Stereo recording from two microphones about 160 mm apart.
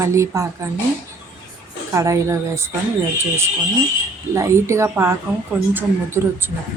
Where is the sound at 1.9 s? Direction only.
20° right (ahead or behind).